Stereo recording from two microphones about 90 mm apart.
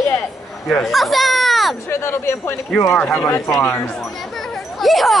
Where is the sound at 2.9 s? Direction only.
15° left (ahead or behind).